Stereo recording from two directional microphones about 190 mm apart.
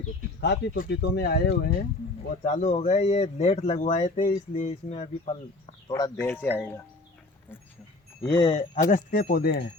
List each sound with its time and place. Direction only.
0.4 s speech: 65° left (ahead or behind)
2.4 s speech: 40° left (ahead or behind)
6.1 s speech: 10° left (ahead or behind)
8.2 s speech: 25° left (ahead or behind)
8.9 s speech: 45° left (ahead or behind)